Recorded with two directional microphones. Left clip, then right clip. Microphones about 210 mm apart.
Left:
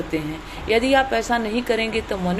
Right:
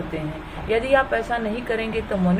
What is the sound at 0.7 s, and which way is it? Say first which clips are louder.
A woman's voice: left 1 dB; 35° left (ahead or behind).